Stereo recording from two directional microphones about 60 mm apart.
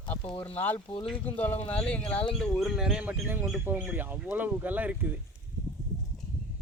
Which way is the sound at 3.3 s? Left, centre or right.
Right.